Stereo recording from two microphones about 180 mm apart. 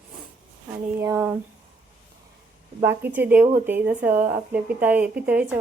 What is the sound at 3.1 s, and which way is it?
Speech, 10° right (ahead or behind).